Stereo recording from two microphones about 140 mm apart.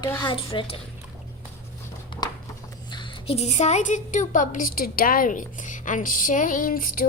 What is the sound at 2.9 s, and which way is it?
A woman's voice, 40° left (ahead or behind).